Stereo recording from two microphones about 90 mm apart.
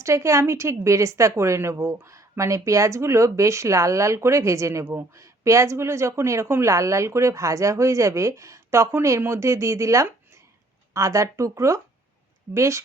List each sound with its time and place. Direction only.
0.0 s speech: 30° right (ahead or behind)